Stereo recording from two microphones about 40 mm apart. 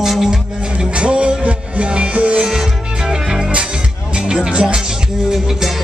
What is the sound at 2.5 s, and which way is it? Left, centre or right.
Music, centre.